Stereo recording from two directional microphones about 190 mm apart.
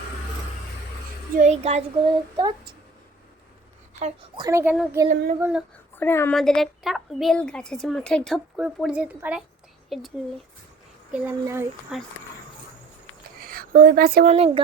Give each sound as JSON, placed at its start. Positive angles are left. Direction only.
{"t": 1.4, "sound": "child singing", "side_deg": -35}
{"t": 2.3, "sound": "speech", "side_deg": -20}
{"t": 4.4, "sound": "a child's voice", "side_deg": -15}
{"t": 5.0, "sound": "child singing", "side_deg": -40}
{"t": 5.4, "sound": "a woman's voice", "side_deg": -5}
{"t": 6.0, "sound": "a woman's voice", "side_deg": 10}
{"t": 11.1, "sound": "a child's voice", "side_deg": -10}
{"t": 13.4, "sound": "speech", "side_deg": -50}
{"t": 14.3, "sound": "child singing", "side_deg": -30}